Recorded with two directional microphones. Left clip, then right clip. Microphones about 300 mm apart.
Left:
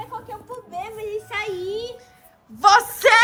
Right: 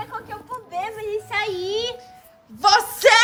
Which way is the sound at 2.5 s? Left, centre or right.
Centre.